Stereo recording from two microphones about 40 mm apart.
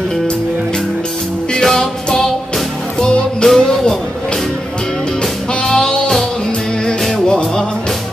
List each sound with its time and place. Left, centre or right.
1.5 s music: centre
3.4 s music: centre
5.5 s music: centre
7.2 s music: left